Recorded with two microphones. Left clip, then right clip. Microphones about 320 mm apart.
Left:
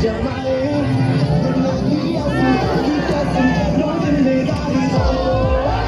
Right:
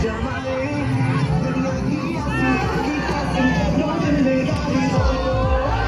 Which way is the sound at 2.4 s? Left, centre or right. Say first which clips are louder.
Left 3 dB; centre.